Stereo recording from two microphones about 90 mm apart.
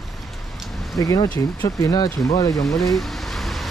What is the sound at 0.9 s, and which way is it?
Speech, 40° left (ahead or behind).